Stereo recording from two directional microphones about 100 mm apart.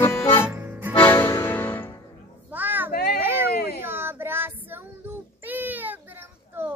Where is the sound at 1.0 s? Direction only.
25° left (ahead or behind).